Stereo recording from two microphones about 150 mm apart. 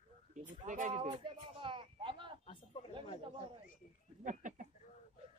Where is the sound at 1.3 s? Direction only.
35° right (ahead or behind).